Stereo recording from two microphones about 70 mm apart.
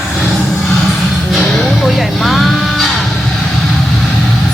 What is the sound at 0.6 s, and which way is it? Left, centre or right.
Music, centre.